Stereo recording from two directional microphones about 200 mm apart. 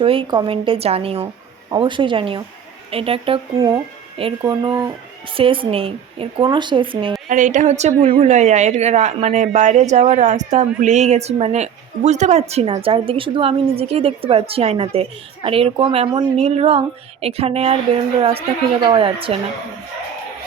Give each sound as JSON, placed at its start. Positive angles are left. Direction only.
{"t": 0.0, "sound": "a woman's voice", "side_deg": -25}
{"t": 7.3, "sound": "a woman's voice", "side_deg": -40}